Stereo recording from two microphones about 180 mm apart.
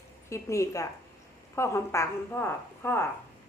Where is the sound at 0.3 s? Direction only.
15° left (ahead or behind).